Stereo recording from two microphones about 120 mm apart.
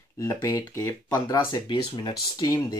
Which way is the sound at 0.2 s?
25° left (ahead or behind).